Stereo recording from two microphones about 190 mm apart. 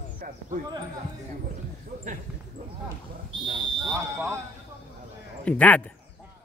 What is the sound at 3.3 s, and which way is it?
Speech, 25° right (ahead or behind).